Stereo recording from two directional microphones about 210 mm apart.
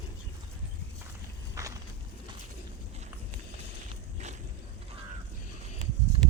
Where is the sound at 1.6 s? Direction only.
15° right (ahead or behind).